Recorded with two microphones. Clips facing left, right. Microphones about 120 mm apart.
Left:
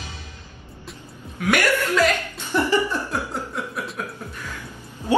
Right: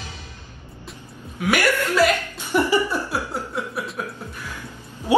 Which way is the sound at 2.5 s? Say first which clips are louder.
Right 1 dB; 15° right (ahead or behind).